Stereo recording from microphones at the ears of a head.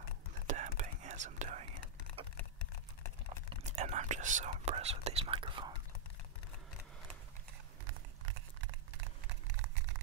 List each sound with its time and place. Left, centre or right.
0.5 s whispering: right
3.7 s speech: right
7.8 s a sound: right